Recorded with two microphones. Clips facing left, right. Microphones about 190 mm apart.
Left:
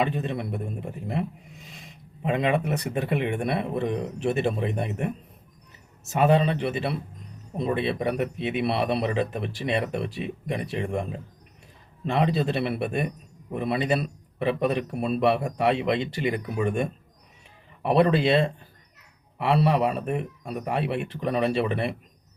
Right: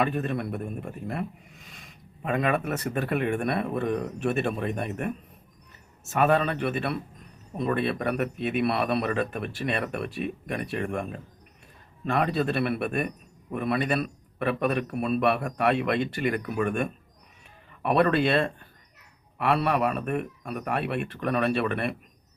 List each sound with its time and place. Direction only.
0.0 s speech: 20° left (ahead or behind)
12.0 s speech: 25° left (ahead or behind)
19.4 s speech: 25° left (ahead or behind)